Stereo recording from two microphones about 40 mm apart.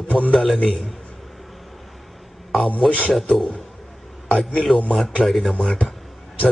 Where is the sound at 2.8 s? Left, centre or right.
Left.